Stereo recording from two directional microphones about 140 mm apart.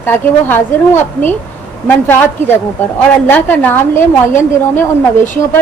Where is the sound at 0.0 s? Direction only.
15° left (ahead or behind).